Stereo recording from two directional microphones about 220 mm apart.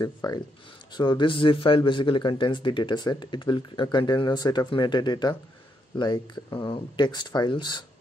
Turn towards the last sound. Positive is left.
turn(degrees=20)  # may be behind; listen again after turning